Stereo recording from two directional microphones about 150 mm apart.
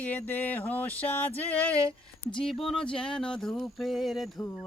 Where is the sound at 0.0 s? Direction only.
10° left (ahead or behind).